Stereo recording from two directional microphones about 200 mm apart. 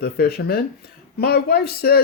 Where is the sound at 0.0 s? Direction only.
50° left (ahead or behind).